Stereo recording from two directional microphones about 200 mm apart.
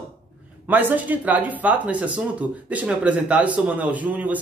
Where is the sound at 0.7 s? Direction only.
10° right (ahead or behind).